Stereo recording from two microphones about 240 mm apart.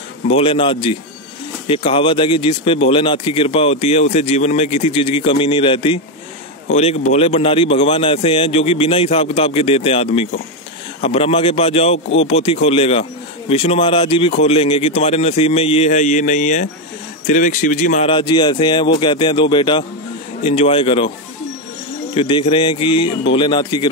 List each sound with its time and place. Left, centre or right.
0.3 s speech: left
22.1 s speech: left